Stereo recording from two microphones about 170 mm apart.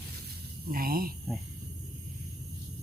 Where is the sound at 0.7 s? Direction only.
60° right (ahead or behind).